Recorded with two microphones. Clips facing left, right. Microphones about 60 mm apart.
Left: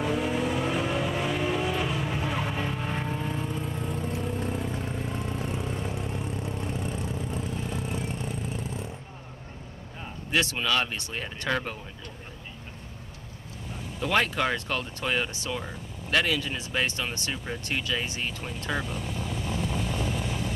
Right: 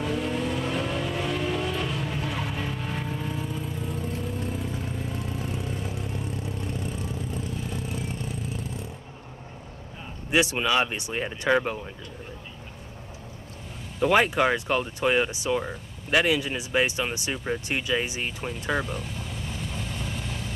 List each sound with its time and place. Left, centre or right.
0.0 s vehicle: centre
10.3 s speech: centre
13.9 s speech: centre